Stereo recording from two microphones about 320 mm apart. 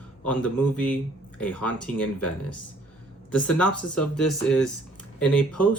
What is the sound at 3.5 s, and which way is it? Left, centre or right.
Speech, left.